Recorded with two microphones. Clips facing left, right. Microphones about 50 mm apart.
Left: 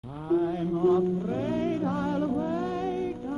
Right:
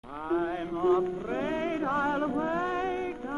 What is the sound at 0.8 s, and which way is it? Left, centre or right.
Music, right.